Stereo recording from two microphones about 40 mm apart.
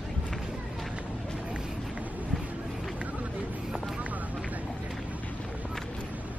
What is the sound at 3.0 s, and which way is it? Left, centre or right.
Run, right.